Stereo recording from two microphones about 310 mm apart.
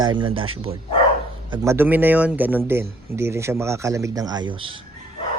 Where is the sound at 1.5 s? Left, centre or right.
Centre.